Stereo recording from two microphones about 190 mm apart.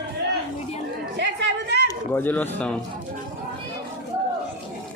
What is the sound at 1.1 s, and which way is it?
Chatter, 65° right (ahead or behind).